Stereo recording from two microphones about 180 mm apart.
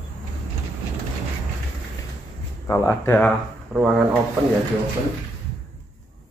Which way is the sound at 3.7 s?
5° right (ahead or behind).